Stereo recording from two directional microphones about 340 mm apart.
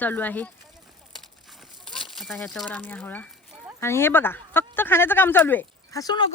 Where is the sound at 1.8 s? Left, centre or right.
Centre.